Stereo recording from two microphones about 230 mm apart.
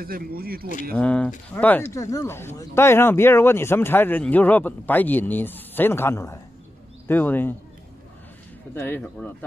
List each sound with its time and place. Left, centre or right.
0.0 s speech: right
0.9 s speech: centre
8.7 s speech: centre